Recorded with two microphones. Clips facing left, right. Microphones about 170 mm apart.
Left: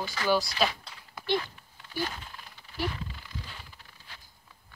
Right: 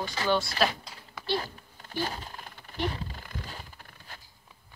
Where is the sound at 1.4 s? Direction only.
40° right (ahead or behind).